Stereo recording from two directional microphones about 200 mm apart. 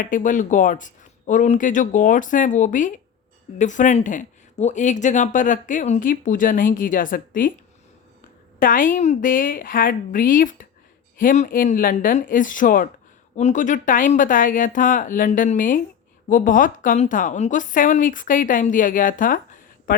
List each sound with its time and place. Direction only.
0.0 s speech: 40° left (ahead or behind)
8.5 s a woman's voice: 40° left (ahead or behind)